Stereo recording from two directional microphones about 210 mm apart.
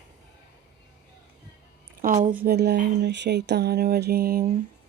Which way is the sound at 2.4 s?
50° right (ahead or behind).